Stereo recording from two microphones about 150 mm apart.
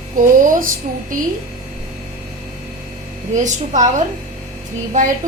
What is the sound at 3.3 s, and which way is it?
A woman's voice, 55° right (ahead or behind).